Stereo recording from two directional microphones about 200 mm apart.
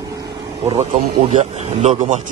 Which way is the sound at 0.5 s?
30° right (ahead or behind).